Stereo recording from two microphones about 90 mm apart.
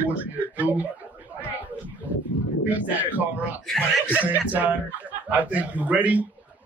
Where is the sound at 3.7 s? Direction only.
5° left (ahead or behind).